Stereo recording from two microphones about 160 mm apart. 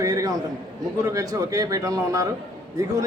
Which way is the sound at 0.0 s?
20° right (ahead or behind).